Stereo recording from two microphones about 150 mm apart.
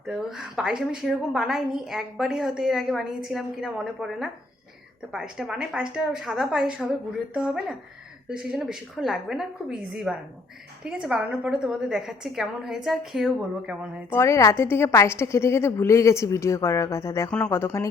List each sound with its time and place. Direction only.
0.1 s a woman's voice: 5° right (ahead or behind)
14.1 s a woman's voice: 20° left (ahead or behind)